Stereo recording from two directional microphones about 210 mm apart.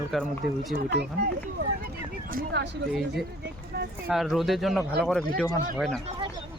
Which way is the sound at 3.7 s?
50° right (ahead or behind).